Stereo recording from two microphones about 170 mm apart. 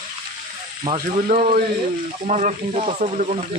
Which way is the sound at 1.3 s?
45° right (ahead or behind).